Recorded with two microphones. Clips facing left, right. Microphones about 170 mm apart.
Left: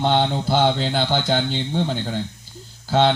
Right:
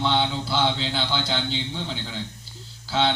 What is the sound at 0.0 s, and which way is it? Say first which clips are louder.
Speech: left 4 dB; 50° left (ahead or behind).